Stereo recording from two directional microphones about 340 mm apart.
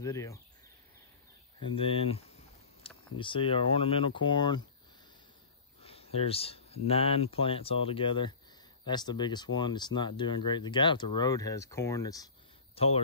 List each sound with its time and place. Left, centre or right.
0.0 s speech: centre
1.6 s speech: centre
5.8 s speech: centre